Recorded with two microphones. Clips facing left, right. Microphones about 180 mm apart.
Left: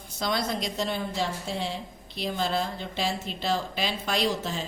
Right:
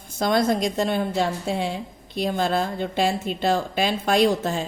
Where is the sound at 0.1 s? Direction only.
50° right (ahead or behind).